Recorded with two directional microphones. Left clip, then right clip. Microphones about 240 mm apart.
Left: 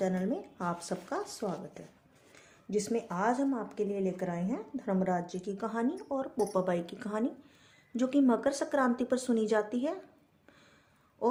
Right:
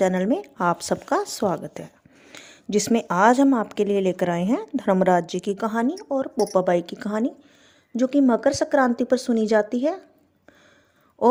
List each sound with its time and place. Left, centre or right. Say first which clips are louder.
0.0 s a woman's voice: right 12 dB; right